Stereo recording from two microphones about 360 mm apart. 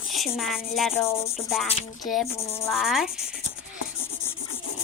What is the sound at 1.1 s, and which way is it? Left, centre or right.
Speech, centre.